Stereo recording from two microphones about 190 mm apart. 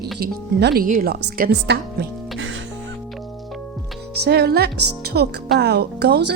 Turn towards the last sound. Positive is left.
turn(degrees=-60)  # may be behind; listen again after turning